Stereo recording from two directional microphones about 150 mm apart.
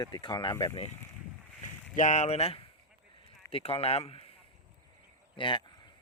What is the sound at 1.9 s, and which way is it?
Speech, 55° left (ahead or behind).